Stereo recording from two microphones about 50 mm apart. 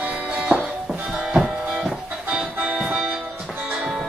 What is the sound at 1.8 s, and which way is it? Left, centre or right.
Music, centre.